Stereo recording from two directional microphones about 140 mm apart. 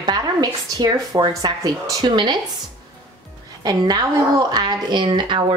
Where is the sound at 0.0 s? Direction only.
30° right (ahead or behind).